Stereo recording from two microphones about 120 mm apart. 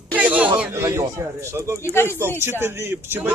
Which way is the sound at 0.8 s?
25° right (ahead or behind).